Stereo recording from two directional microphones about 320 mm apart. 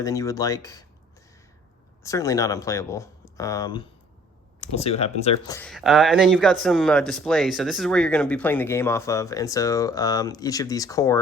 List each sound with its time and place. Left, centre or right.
0.0 s speech: centre
2.0 s speech: centre
5.5 s speech: centre